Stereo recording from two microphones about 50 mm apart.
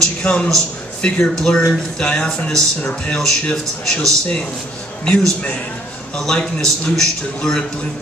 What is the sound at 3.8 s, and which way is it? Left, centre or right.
Speech, centre.